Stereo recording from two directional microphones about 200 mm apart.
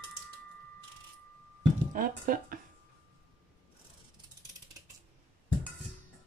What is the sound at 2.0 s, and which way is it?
Speech, 45° right (ahead or behind).